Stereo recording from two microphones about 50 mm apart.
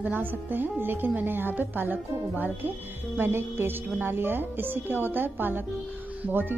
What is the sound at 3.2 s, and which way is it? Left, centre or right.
A woman's voice, right.